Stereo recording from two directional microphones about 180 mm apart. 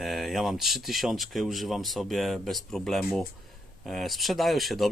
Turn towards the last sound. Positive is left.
turn(degrees=0)  # may be behind; listen again after turning